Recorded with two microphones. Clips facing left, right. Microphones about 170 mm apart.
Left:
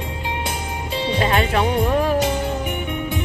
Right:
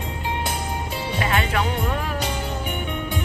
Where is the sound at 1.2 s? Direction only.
25° left (ahead or behind).